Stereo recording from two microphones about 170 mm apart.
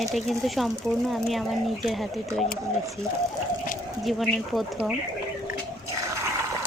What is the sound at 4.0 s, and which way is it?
Speech, centre (ahead or behind).